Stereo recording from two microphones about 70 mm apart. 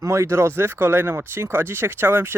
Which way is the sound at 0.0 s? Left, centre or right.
Right.